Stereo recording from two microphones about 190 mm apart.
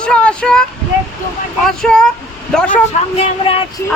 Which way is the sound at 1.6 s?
5° left (ahead or behind).